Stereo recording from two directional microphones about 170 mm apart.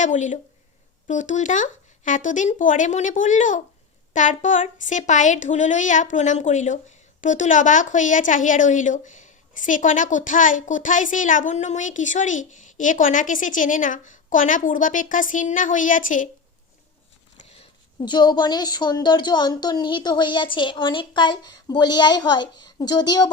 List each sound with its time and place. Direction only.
0.0 s a woman's voice: 45° left (ahead or behind)
18.0 s a woman's voice: 25° left (ahead or behind)